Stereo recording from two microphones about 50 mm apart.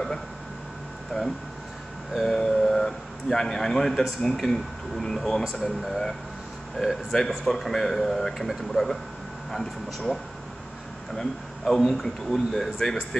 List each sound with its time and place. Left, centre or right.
1.1 s speech: centre
2.1 s a man's voice: centre
7.1 s a man's voice: centre
11.1 s a man's voice: centre